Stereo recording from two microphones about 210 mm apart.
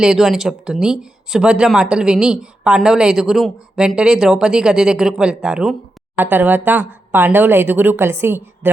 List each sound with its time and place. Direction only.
0.0 s speech: centre (ahead or behind)